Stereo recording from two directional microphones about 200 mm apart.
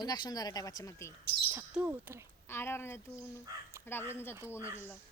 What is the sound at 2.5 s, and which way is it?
A woman's voice, 10° left (ahead or behind).